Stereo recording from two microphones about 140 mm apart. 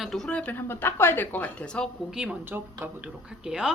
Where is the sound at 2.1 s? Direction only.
5° right (ahead or behind).